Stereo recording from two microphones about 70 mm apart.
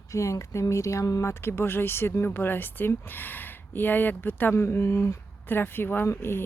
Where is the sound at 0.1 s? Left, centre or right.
Left.